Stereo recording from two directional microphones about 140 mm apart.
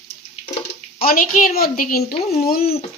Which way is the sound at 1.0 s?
85° left.